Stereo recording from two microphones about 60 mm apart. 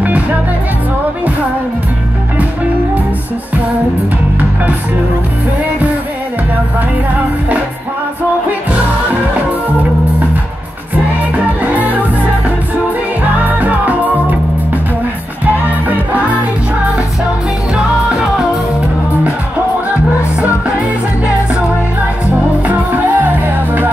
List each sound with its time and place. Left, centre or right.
11.3 s music: right
22.2 s music: right